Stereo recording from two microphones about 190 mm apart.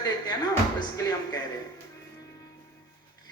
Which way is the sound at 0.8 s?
20° left (ahead or behind).